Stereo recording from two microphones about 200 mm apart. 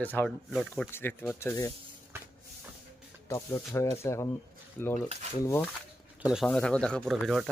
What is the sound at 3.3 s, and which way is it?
Speech, 15° left (ahead or behind).